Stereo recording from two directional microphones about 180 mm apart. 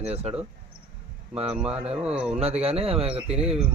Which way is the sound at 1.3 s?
35° right (ahead or behind).